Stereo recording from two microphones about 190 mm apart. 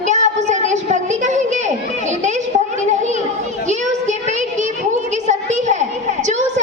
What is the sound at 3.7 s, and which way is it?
Child singing, 40° right (ahead or behind).